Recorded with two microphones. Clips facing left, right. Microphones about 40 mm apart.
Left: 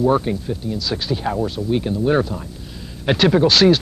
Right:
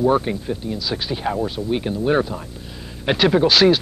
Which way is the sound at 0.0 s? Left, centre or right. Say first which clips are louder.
Left 1 dB; centre.